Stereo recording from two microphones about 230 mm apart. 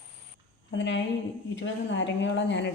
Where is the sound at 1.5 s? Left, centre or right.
Left.